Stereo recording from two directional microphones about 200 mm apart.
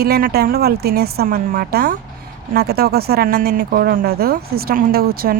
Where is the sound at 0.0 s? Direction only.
50° right (ahead or behind).